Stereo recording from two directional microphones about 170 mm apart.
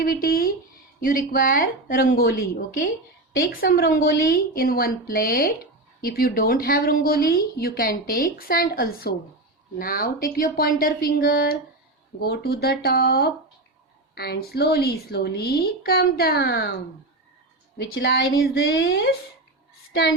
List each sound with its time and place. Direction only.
0.0 s a woman's voice: 60° left (ahead or behind)
17.7 s a woman's voice: 65° left (ahead or behind)
19.9 s child singing: 90° left